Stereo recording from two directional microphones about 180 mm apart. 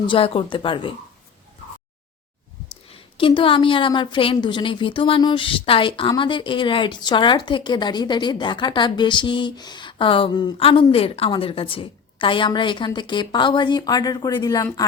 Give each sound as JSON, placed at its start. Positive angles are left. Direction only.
{"t": 0.1, "sound": "a woman's voice", "side_deg": 30}
{"t": 3.2, "sound": "a woman's voice", "side_deg": 30}